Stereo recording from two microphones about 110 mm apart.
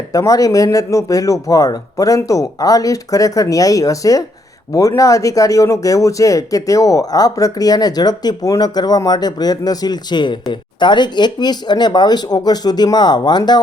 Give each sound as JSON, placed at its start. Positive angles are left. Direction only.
{"t": 0.1, "sound": "speech", "side_deg": 35}